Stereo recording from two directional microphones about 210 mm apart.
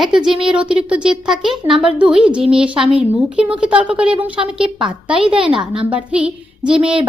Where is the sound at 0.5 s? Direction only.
5° right (ahead or behind).